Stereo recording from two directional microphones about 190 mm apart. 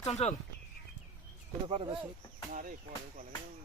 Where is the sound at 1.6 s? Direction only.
30° right (ahead or behind).